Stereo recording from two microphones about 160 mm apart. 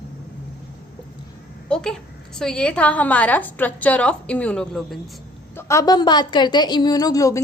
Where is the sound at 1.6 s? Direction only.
5° left (ahead or behind).